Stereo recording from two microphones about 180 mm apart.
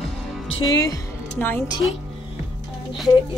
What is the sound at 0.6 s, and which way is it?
Speech, 20° left (ahead or behind).